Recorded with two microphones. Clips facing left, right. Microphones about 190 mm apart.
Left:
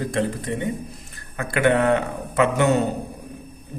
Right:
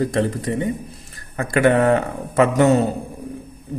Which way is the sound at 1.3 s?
40° right (ahead or behind).